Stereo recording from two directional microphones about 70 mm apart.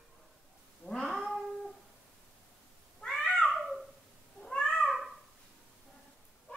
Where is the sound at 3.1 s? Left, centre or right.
Centre.